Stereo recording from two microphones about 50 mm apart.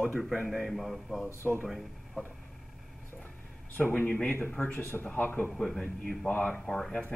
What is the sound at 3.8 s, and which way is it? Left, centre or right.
Speech, left.